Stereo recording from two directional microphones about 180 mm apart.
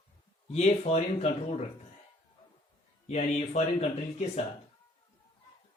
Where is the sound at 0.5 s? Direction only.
35° left (ahead or behind).